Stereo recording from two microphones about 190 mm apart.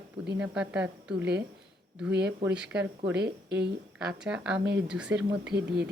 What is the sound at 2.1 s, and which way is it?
Speech, 65° right (ahead or behind).